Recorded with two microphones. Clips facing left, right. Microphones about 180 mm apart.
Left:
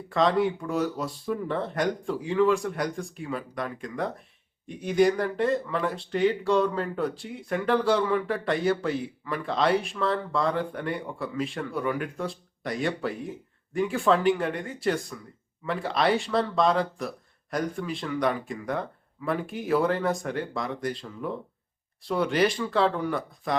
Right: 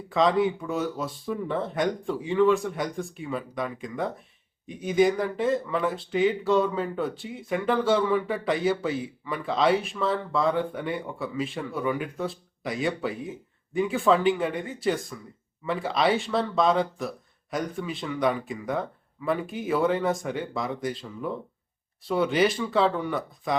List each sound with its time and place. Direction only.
0.1 s speech: centre (ahead or behind)